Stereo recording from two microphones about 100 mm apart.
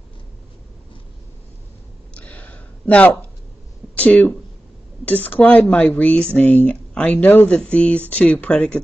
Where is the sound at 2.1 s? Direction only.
15° left (ahead or behind).